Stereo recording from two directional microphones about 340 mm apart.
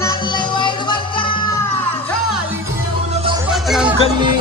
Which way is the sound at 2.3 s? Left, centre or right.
Centre.